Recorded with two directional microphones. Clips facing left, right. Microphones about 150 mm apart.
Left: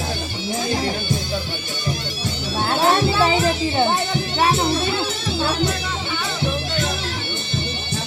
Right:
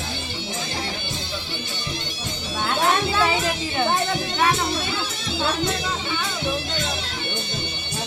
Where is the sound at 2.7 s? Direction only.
35° left (ahead or behind).